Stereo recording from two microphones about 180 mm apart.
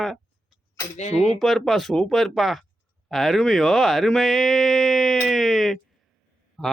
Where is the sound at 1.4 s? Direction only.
Centre (ahead or behind).